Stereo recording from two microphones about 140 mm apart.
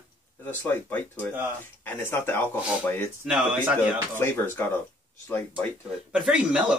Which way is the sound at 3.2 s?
10° right (ahead or behind).